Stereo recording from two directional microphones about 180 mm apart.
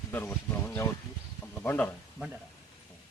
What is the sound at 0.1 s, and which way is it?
Speech, 10° left (ahead or behind).